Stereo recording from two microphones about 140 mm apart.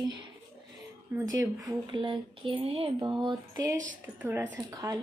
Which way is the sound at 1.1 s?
25° right (ahead or behind).